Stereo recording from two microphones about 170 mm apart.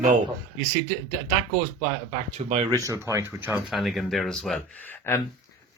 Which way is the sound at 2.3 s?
35° right (ahead or behind).